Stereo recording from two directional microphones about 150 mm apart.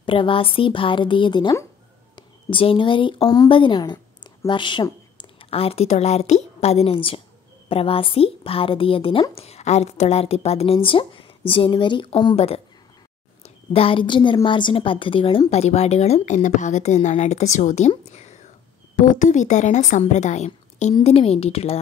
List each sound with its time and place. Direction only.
0.0 s a woman's voice: 35° left (ahead or behind)
13.7 s a woman's voice: 35° left (ahead or behind)
18.9 s a woman's voice: 60° left (ahead or behind); by 21.7 s 40° left (ahead or behind)